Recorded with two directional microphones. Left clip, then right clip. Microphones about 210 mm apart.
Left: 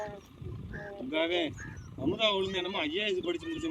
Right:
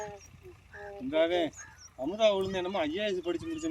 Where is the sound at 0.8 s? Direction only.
45° right (ahead or behind).